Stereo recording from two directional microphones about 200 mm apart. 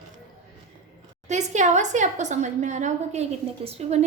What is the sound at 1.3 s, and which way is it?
A woman's voice, 35° right (ahead or behind).